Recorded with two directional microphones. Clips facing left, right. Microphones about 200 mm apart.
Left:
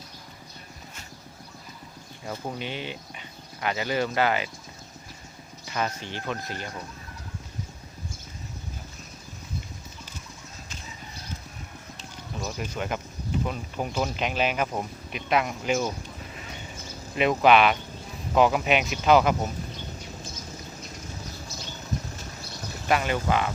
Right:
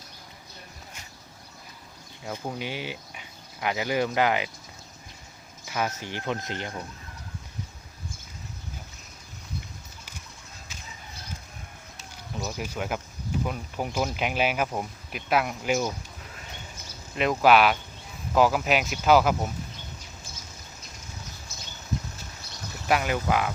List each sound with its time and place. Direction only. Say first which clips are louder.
2.2 s speech: even; 5° right (ahead or behind)
5.7 s speech: even; 10° right (ahead or behind)
11.9 s a sound: right 1 dB; 5° right (ahead or behind)
13.4 s speech: right 1 dB; 5° right (ahead or behind)
17.2 s speech: left 1 dB; centre (ahead or behind)
22.9 s speech: even; 10° right (ahead or behind)